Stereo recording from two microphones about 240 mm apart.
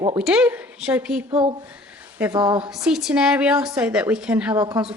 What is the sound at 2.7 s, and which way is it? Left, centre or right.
A woman's voice, centre.